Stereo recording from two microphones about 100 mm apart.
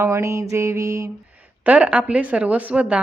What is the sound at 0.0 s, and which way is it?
Mantra, 30° right (ahead or behind).